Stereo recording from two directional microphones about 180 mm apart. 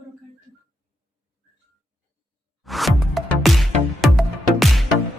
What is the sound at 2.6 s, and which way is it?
Music, centre (ahead or behind).